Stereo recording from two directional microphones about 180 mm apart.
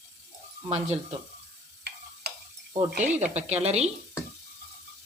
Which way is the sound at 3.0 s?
40° right (ahead or behind).